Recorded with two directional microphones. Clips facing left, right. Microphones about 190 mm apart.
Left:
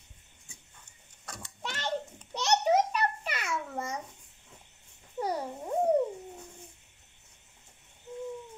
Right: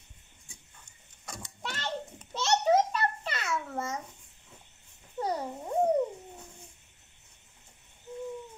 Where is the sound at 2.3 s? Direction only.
15° left (ahead or behind).